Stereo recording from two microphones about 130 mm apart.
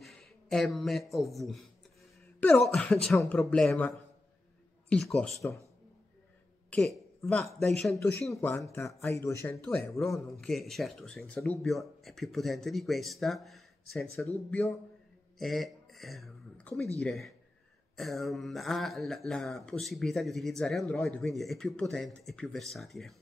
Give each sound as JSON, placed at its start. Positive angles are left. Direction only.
{"t": 0.0, "sound": "a man's voice", "side_deg": 5}
{"t": 6.7, "sound": "a woman's voice", "side_deg": 5}
{"t": 9.5, "sound": "speech", "side_deg": 10}
{"t": 9.9, "sound": "speech", "side_deg": 0}
{"t": 15.3, "sound": "a sound", "side_deg": 0}
{"t": 17.0, "sound": "speech", "side_deg": 0}